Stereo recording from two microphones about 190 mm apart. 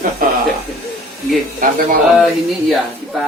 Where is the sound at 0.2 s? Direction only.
45° right (ahead or behind).